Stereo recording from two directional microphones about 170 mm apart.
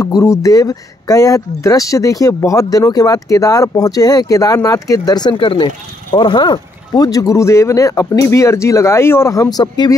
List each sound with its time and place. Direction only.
0.0 s speech: 20° left (ahead or behind)